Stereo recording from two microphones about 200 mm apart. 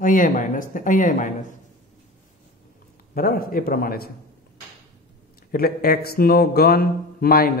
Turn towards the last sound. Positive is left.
turn(degrees=50)  # may be behind; listen again after turning